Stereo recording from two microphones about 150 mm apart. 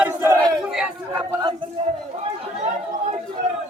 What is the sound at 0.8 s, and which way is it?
Chatter, 10° right (ahead or behind).